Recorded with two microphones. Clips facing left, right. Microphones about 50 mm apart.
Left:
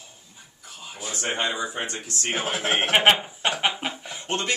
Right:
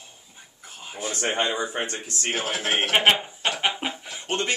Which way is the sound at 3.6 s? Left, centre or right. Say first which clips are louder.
Even; centre.